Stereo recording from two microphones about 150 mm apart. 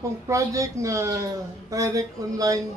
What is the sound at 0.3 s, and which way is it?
Speech, 20° right (ahead or behind).